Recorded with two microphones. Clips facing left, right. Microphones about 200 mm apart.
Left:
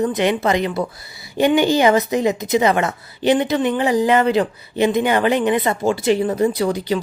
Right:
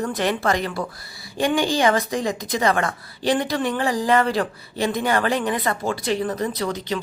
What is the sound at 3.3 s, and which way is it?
Speech, 20° left (ahead or behind).